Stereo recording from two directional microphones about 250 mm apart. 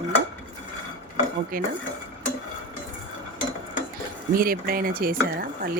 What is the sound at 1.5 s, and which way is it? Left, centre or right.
Speech, right.